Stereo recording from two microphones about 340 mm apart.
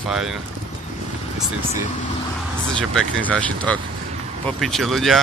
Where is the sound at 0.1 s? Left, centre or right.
Centre.